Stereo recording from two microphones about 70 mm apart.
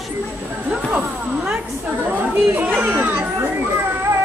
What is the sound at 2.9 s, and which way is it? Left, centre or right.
Children playing, right.